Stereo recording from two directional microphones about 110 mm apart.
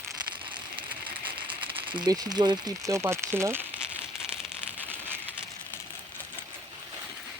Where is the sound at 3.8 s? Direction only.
10° right (ahead or behind).